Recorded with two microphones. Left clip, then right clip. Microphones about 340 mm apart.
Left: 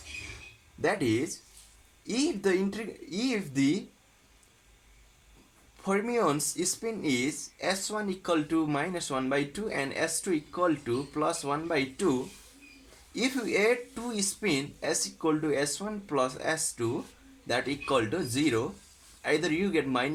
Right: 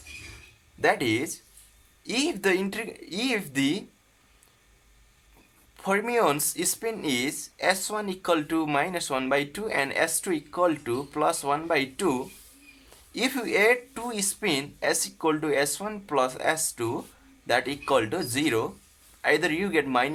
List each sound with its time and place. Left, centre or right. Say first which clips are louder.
0.8 s speech: right 4 dB; right
5.8 s speech: right 4 dB; right
13.1 s speech: right 4 dB; right